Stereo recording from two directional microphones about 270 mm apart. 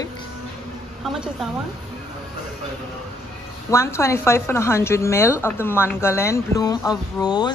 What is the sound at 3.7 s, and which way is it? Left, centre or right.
A woman's voice, centre.